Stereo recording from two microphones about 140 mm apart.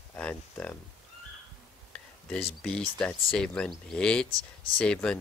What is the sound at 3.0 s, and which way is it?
Speech, 5° left (ahead or behind).